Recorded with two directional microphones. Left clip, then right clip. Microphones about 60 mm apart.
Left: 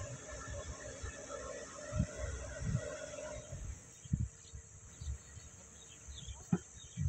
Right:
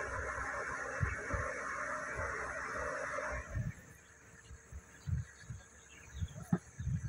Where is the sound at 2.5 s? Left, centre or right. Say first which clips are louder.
Right 6 dB; centre.